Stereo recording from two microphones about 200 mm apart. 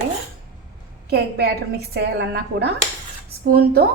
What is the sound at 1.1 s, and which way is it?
A woman's voice, 55° right (ahead or behind).